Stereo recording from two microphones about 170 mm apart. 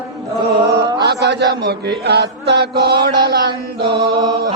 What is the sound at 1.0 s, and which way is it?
Chant, 80° right.